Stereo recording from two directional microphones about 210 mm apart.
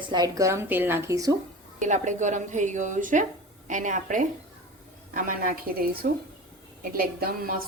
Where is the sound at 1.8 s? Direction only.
35° right (ahead or behind).